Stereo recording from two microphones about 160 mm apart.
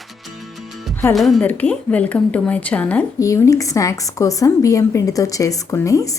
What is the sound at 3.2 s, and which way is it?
A woman's voice, 20° left (ahead or behind).